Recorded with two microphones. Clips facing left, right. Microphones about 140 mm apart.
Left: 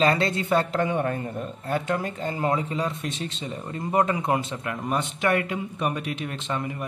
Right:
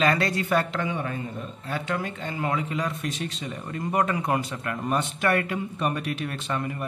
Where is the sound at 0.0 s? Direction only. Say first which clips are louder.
Left 1 dB; 25° left (ahead or behind).